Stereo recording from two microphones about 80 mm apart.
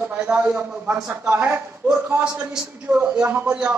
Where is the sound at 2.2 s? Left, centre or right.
Centre.